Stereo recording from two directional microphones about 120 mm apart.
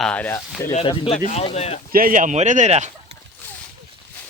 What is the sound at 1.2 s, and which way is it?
Speech, 70° left (ahead or behind).